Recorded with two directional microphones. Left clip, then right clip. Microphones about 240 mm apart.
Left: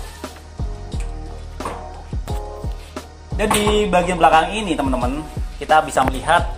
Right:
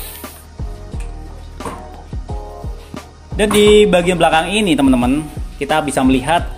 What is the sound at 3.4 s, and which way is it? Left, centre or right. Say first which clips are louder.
Speech: right 8 dB; right.